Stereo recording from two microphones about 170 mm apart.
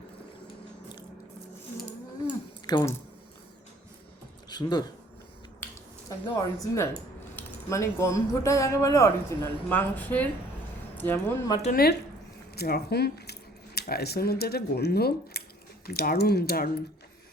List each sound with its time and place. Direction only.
2.6 s speech: 25° left (ahead or behind)
4.4 s speech: 25° left (ahead or behind)
6.1 s speech: 20° left (ahead or behind)
11.7 s speech: 65° left (ahead or behind)